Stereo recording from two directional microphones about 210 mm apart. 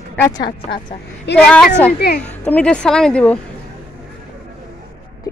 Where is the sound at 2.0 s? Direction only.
50° left (ahead or behind).